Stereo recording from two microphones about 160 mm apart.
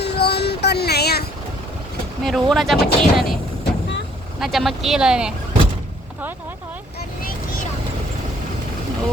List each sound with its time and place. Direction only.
0.0 s child singing: 90° left
2.2 s speech: centre (ahead or behind)
4.4 s speech: centre (ahead or behind)